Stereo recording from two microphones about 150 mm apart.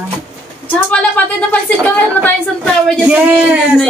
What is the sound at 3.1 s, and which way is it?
Speech, 10° right (ahead or behind).